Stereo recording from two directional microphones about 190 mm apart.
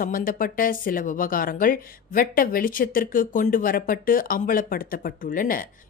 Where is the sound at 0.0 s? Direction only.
50° left (ahead or behind).